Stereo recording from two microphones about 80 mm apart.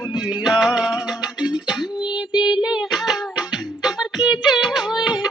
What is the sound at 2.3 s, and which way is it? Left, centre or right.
Child singing, left.